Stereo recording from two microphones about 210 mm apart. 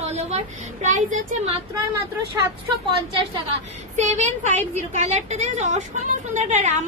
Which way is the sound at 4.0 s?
35° right (ahead or behind).